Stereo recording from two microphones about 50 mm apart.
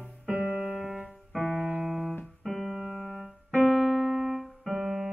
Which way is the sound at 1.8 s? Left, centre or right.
Centre.